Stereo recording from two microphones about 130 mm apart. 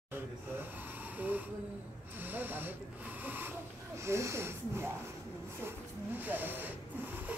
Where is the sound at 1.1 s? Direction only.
15° right (ahead or behind).